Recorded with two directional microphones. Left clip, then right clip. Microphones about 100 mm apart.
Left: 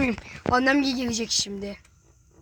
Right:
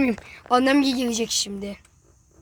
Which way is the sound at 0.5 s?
35° right (ahead or behind).